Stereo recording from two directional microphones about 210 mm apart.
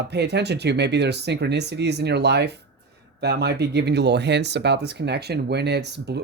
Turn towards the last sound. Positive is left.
turn(degrees=-55)  # may be behind; listen again after turning